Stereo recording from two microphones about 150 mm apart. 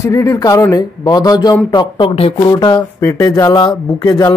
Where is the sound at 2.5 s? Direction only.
25° left (ahead or behind).